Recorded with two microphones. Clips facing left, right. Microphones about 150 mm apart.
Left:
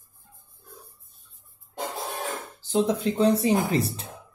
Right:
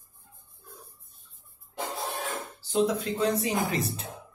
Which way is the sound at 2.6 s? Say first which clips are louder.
Left 2 dB; 25° left (ahead or behind).